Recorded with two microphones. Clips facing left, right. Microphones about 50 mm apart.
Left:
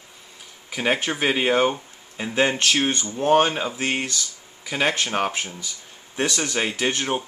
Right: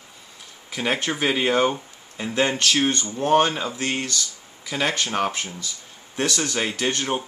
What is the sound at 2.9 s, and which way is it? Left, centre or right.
Speech, centre.